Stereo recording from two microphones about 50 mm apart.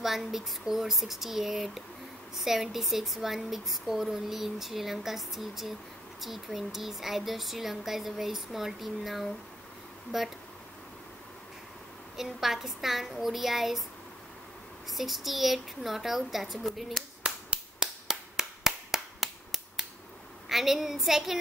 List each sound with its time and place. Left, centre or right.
0.0 s speech: centre
12.2 s speech: centre
14.9 s speech: centre
17.7 s a sound: centre
20.4 s speech: centre